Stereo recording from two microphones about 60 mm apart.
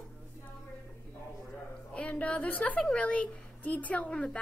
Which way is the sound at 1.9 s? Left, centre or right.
Left.